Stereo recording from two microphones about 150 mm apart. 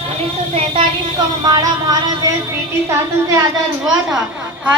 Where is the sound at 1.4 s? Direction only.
25° right (ahead or behind).